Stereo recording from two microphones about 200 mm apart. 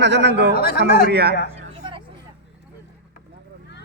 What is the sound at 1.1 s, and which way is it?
Speech, 55° right (ahead or behind).